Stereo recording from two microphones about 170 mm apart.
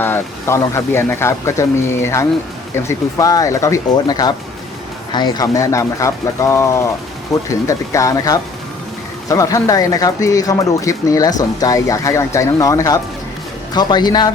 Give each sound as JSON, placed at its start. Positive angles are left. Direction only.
{"t": 0.0, "sound": "speech", "side_deg": 15}